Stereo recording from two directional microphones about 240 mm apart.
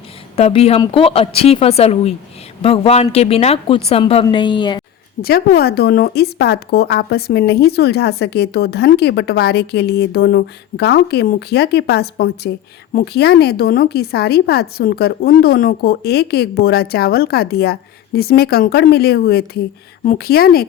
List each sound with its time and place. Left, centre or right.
0.3 s a woman's voice: left
5.2 s speech: left